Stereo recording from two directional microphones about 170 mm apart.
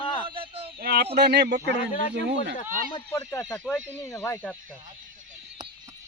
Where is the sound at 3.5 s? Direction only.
10° left (ahead or behind).